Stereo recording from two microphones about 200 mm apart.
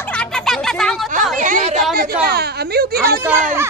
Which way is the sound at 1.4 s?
40° right (ahead or behind).